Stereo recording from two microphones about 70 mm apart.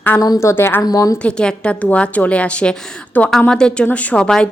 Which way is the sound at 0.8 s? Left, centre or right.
Left.